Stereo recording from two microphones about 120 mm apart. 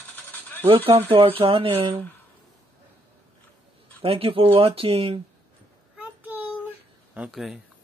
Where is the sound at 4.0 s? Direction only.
50° right (ahead or behind).